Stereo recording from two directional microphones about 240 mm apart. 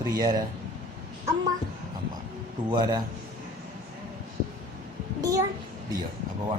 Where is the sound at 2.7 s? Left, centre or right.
Centre.